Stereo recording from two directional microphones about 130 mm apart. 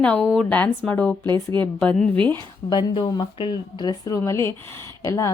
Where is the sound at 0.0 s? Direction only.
10° left (ahead or behind).